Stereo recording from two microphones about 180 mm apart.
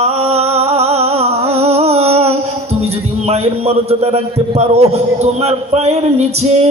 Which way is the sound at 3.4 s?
35° right (ahead or behind).